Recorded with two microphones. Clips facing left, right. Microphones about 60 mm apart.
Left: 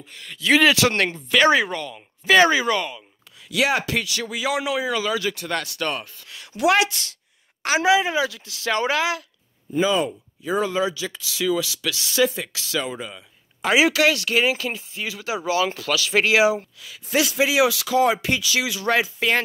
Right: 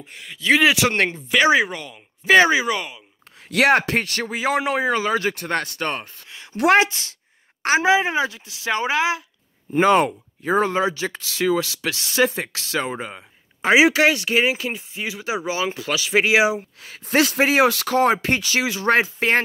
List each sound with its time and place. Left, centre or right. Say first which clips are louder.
0.4 s speech: even; centre
0.7 s speech: even; right
3.4 s speech: right 5 dB; right
6.5 s a woman's voice: right 3 dB; right
6.8 s speech: right 2 dB; right
9.8 s speech: right 5 dB; right
10.4 s speech: right 3 dB; right
16.8 s speech: right 4 dB; right